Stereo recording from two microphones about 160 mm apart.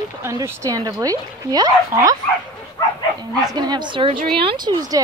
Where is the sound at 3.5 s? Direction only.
25° right (ahead or behind).